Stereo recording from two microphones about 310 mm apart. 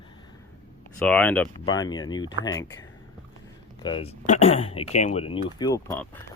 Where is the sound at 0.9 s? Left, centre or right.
Centre.